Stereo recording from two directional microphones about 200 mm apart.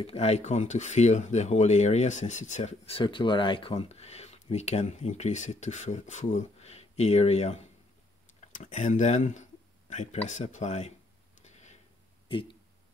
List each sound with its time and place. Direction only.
0.0 s speech: 30° left (ahead or behind)
11.4 s a sound: 35° left (ahead or behind)
12.3 s speech: 25° left (ahead or behind)